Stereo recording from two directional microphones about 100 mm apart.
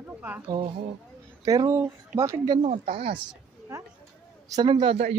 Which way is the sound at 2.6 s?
80° right.